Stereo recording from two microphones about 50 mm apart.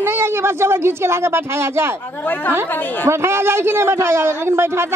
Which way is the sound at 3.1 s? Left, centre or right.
Right.